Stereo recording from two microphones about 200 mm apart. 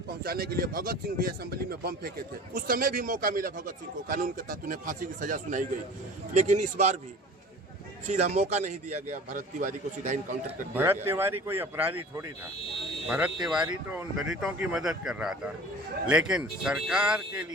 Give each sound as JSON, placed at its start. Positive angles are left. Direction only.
{"t": 0.2, "sound": "a man's voice", "side_deg": -50}
{"t": 8.0, "sound": "a man's voice", "side_deg": -35}
{"t": 10.8, "sound": "speech", "side_deg": -10}